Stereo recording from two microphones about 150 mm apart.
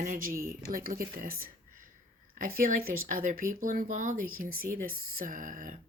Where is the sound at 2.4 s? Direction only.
70° right (ahead or behind).